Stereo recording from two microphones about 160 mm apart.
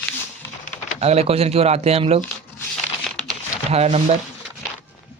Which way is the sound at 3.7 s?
40° right (ahead or behind).